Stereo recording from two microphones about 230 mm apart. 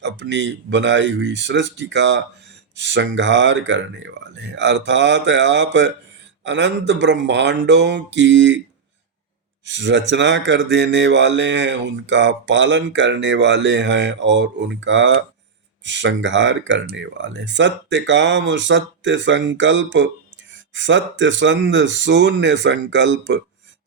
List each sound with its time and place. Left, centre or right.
0.0 s speech: right
9.6 s speech: right